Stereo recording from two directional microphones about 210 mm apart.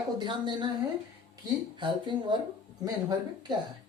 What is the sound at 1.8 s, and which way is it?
Speech, 20° right (ahead or behind).